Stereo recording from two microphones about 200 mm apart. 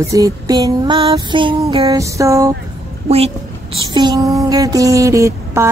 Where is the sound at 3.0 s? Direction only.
30° right (ahead or behind).